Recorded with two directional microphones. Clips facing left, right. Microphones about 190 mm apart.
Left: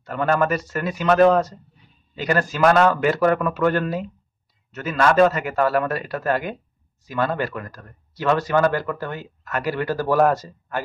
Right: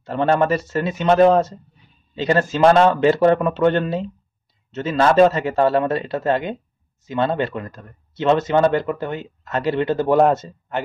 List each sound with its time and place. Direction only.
0.0 s speech: 25° right (ahead or behind)